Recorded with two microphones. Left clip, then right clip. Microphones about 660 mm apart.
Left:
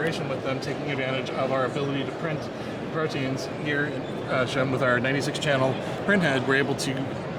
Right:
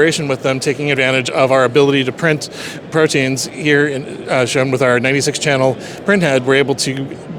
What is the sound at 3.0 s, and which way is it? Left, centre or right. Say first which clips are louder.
Speech: right 15 dB; right.